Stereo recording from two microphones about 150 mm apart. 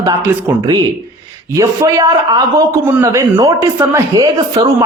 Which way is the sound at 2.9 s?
20° right (ahead or behind).